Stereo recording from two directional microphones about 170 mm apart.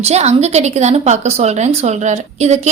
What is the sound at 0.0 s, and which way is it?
Speech, 40° right (ahead or behind).